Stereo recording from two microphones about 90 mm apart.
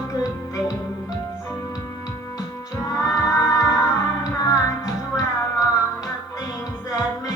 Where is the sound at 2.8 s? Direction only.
40° left (ahead or behind).